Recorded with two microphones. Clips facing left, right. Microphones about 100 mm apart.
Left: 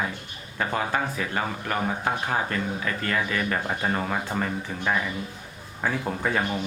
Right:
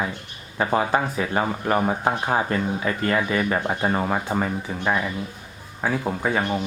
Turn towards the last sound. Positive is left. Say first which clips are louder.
# right 3 dB
turn(degrees=-5)  # may be behind; listen again after turning